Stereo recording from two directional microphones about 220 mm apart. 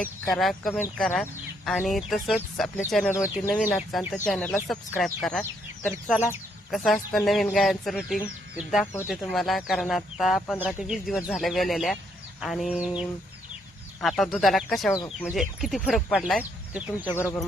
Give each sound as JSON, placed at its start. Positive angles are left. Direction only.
{"t": 0.0, "sound": "speech", "side_deg": 0}
{"t": 14.9, "sound": "speech", "side_deg": 15}
{"t": 15.3, "sound": "speech", "side_deg": 0}